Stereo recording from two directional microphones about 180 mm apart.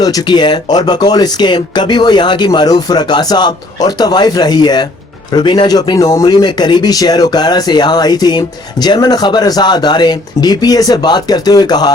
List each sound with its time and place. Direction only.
0.0 s speech: 20° left (ahead or behind)